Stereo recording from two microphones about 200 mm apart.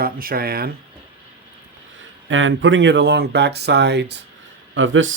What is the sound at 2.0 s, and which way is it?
Speech, 70° right (ahead or behind).